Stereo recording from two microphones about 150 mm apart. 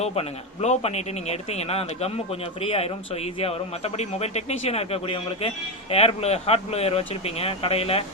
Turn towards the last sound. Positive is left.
turn(degrees=40)  # may be behind; listen again after turning